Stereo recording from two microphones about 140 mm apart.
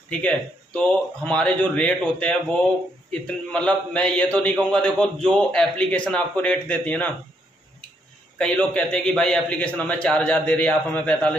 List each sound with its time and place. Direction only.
0.1 s a man's voice: 10° left (ahead or behind)
8.4 s a man's voice: 10° left (ahead or behind)